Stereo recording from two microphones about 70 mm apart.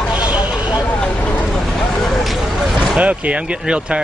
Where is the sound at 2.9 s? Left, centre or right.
Centre.